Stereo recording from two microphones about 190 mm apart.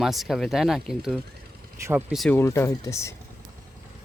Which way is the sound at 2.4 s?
15° left (ahead or behind).